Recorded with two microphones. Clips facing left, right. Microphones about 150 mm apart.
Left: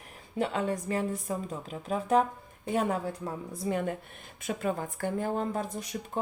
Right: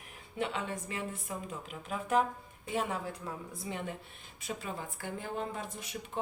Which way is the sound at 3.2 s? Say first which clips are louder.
Left 7 dB; 50° left (ahead or behind).